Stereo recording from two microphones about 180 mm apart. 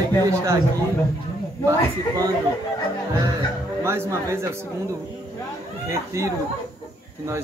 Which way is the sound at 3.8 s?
15° right (ahead or behind).